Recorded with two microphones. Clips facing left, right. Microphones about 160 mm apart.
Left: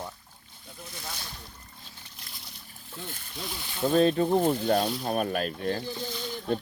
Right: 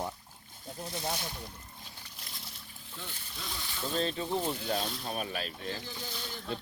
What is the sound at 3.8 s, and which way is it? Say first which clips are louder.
Speech: left 11 dB; 55° left (ahead or behind).